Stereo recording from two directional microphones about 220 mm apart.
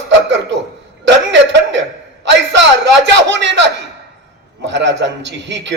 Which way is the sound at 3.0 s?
55° right (ahead or behind).